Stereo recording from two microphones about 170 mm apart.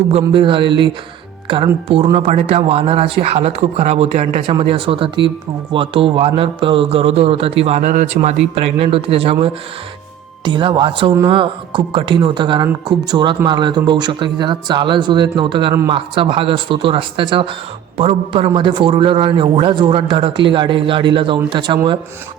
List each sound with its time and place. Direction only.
0.1 s a man's voice: 30° right (ahead or behind)